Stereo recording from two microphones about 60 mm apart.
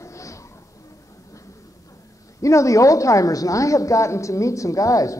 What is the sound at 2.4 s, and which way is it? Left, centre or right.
A woman's voice, left.